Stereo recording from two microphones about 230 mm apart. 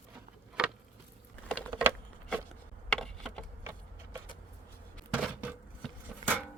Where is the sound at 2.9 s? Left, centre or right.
Centre.